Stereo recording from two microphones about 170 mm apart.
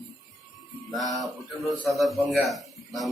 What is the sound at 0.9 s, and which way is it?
A man's voice, centre (ahead or behind).